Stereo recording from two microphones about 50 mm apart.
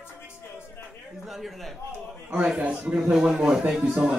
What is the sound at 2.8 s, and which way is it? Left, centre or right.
Speech, right.